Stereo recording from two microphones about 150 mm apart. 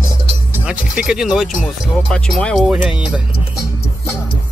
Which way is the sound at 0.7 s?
5° right (ahead or behind).